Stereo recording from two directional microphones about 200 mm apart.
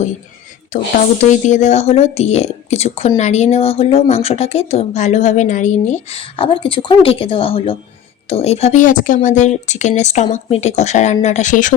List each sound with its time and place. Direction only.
0.7 s speech: 40° left (ahead or behind)